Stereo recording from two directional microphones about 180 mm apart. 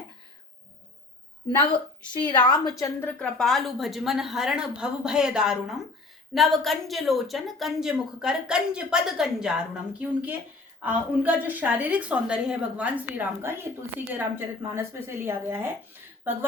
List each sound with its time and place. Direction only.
2.2 s a woman's voice: 25° left (ahead or behind); by 15.7 s 10° right (ahead or behind)